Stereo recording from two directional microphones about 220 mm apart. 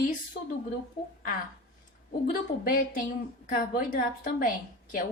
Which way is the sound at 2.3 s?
40° left (ahead or behind).